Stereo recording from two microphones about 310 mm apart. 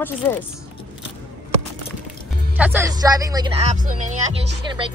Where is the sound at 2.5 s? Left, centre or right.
Centre.